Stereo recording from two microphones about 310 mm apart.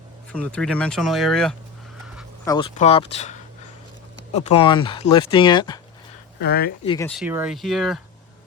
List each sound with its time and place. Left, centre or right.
0.3 s speech: centre
2.4 s speech: centre
4.4 s speech: centre
6.4 s speech: left
6.8 s speech: centre
7.1 s speech: centre